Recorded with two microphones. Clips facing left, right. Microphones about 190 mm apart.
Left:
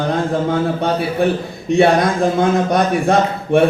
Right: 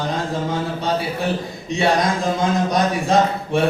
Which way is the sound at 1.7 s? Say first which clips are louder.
Left 6 dB; 60° left (ahead or behind).